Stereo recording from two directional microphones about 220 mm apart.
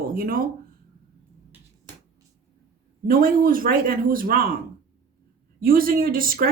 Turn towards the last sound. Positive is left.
turn(degrees=-40)  # may be behind; listen again after turning